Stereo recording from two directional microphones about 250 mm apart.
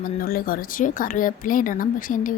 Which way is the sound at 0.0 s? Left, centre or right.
Left.